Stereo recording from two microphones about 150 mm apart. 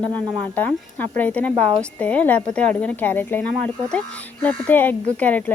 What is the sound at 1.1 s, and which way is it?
A woman's voice, 10° left (ahead or behind).